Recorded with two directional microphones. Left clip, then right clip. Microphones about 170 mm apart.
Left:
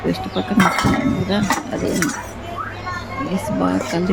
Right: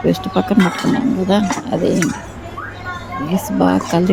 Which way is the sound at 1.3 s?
20° right (ahead or behind).